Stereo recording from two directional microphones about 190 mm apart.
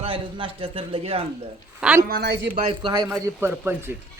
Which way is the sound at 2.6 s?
25° right (ahead or behind).